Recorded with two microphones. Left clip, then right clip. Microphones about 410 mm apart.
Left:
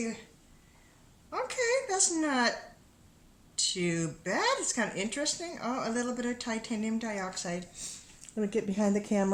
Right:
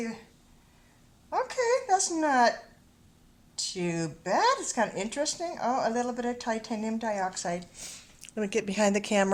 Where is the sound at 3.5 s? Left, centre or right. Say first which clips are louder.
Left 1 dB; centre.